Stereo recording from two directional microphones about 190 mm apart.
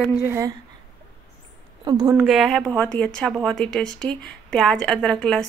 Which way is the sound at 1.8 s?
20° right (ahead or behind).